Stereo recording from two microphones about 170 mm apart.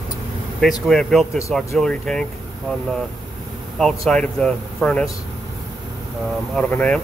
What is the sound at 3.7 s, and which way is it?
Speech, centre (ahead or behind).